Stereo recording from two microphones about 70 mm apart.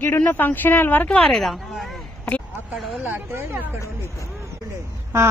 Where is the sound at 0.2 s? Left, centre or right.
Left.